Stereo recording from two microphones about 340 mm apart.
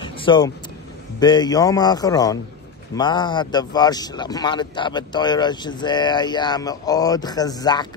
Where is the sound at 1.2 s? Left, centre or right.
Centre.